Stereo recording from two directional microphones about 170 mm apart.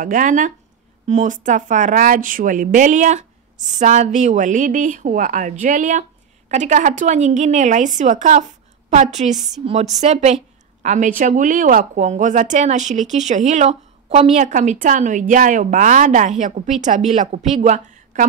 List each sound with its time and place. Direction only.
0.0 s a woman's voice: 50° right (ahead or behind)